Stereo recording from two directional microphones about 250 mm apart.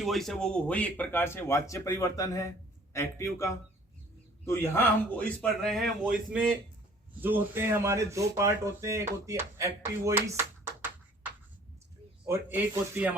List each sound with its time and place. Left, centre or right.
0.0 s a man's voice: centre
10.8 s a sound: centre
12.2 s speech: centre